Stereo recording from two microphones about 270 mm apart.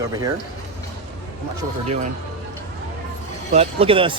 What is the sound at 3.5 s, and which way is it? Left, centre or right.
Speech, right.